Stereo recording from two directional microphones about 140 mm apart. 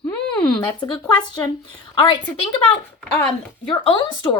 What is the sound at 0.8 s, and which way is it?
A woman's voice, 30° left (ahead or behind).